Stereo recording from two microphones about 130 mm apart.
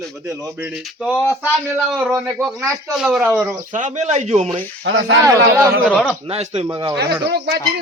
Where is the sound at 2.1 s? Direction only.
20° right (ahead or behind).